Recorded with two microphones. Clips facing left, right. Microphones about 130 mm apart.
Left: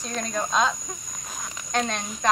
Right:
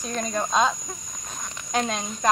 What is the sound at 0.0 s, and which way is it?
Speech, 5° right (ahead or behind).